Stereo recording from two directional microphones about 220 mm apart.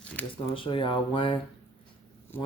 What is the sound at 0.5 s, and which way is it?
Speech, 25° left (ahead or behind).